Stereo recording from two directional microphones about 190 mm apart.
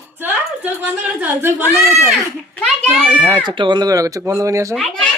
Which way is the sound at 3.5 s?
25° right (ahead or behind).